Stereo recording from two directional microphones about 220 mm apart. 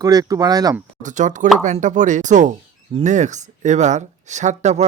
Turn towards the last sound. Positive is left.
turn(degrees=-30)  # may be behind; listen again after turning